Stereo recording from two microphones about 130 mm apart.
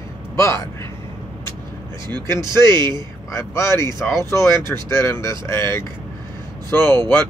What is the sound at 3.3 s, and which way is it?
Speech, 20° left (ahead or behind).